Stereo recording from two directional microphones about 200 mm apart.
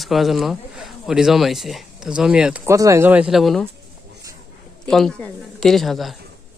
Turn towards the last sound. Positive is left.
turn(degrees=0)  # may be behind; listen again after turning